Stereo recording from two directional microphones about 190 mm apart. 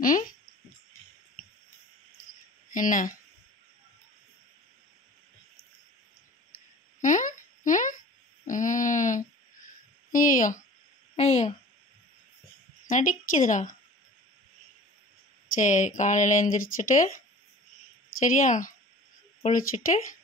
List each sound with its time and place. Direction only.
0.0 s speech: 45° left (ahead or behind)
2.7 s speech: 45° left (ahead or behind)
7.0 s a sound: 40° left (ahead or behind)
11.1 s a sound: 35° left (ahead or behind)
12.8 s a woman's voice: 45° left (ahead or behind)
15.6 s speech: 40° left (ahead or behind)
18.2 s speech: 40° left (ahead or behind)